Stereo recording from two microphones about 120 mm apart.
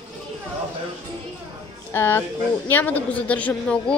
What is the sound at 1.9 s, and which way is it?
A man's voice, 20° left (ahead or behind).